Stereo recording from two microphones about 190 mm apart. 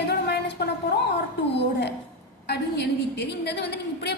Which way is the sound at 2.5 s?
60° left (ahead or behind).